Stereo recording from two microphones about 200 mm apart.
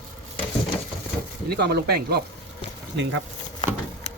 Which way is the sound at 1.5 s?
55° right (ahead or behind).